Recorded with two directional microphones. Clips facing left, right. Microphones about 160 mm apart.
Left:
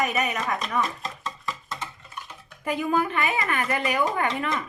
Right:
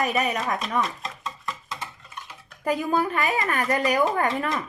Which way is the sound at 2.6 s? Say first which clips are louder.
Right 1 dB; 40° right (ahead or behind).